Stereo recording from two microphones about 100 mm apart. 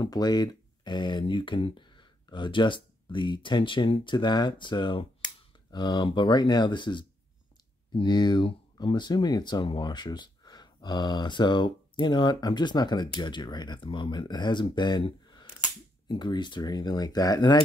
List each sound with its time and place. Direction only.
0.1 s speech: 45° left (ahead or behind)
16.1 s speech: 50° left (ahead or behind)